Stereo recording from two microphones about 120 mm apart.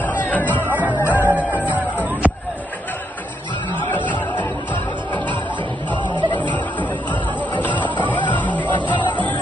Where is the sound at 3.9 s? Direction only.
15° left (ahead or behind).